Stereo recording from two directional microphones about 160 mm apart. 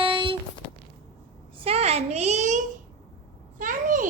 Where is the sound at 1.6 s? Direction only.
40° right (ahead or behind).